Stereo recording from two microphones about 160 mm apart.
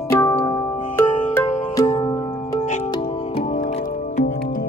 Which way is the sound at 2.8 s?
30° left (ahead or behind).